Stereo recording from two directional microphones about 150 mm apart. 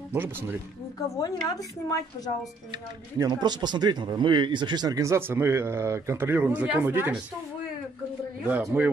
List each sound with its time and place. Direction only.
0.1 s a man's voice: 15° right (ahead or behind)
1.1 s a woman's voice: 25° left (ahead or behind)
3.2 s speech: 25° right (ahead or behind)
8.5 s a man's voice: 10° right (ahead or behind)